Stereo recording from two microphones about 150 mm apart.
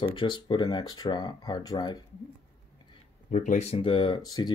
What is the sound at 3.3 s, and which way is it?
Speech, 55° left (ahead or behind).